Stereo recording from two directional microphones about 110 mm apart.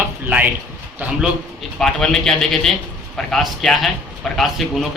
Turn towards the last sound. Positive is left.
turn(degrees=0)  # may be behind; listen again after turning